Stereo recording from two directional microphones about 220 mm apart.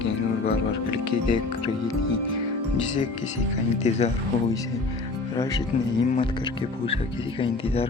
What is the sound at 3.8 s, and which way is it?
Speech, 30° left (ahead or behind).